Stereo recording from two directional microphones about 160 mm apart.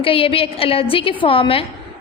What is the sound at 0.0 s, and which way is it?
A woman's voice, 35° left (ahead or behind).